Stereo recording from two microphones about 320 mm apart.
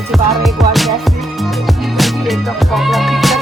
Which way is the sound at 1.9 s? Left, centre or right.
Centre.